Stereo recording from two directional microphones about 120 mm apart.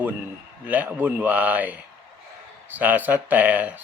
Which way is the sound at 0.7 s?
15° right (ahead or behind).